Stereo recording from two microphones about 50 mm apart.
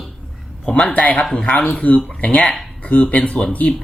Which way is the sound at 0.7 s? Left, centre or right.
Left.